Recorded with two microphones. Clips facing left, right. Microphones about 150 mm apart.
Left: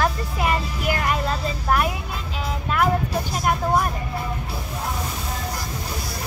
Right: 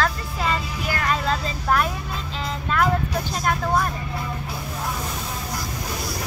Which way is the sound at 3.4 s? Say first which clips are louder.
Left 1 dB; 10° left (ahead or behind).